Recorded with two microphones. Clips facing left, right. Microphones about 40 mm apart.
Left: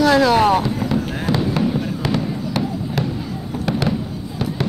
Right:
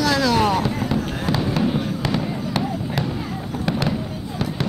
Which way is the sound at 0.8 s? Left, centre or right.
Centre.